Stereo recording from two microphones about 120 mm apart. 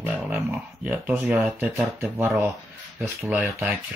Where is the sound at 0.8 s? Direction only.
10° right (ahead or behind).